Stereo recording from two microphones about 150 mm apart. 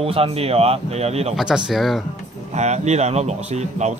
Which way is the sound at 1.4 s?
5° right (ahead or behind).